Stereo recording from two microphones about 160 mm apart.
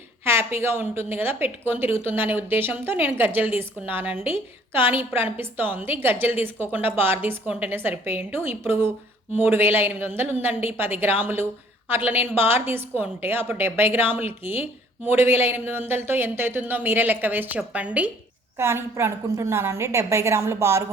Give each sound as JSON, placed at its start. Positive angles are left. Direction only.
{"t": 0.3, "sound": "a woman's voice", "side_deg": -15}